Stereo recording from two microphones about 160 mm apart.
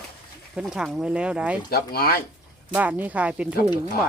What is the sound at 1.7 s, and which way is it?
Speech, 70° left (ahead or behind).